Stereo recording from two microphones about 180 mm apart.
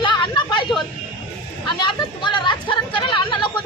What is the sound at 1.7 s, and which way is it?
Speech, 25° left (ahead or behind).